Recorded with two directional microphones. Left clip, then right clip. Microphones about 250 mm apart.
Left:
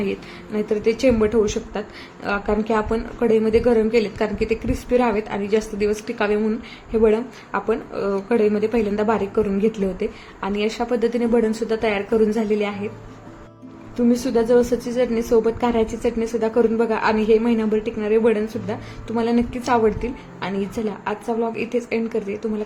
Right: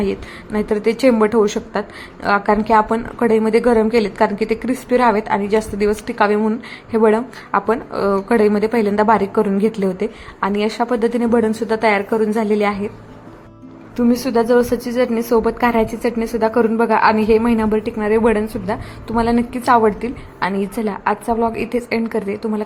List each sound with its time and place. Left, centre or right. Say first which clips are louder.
0.0 s a woman's voice: right 4 dB; centre
13.9 s a woman's voice: right 3 dB; centre